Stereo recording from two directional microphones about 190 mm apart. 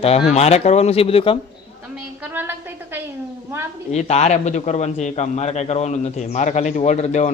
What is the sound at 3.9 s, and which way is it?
A man's voice, 35° left (ahead or behind).